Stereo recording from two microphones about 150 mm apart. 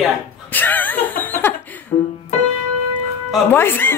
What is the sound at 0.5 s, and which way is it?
Speech, 10° left (ahead or behind).